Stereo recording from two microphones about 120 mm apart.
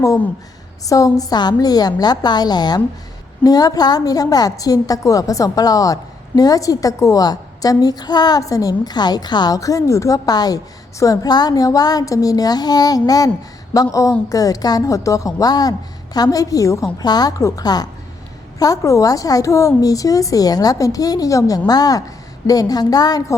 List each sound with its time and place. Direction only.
0.9 s a woman's voice: 30° left (ahead or behind)